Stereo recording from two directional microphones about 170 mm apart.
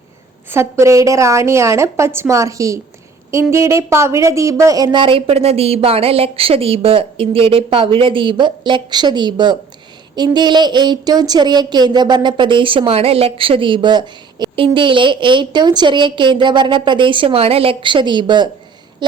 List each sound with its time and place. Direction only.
0.5 s a woman's voice: 15° right (ahead or behind)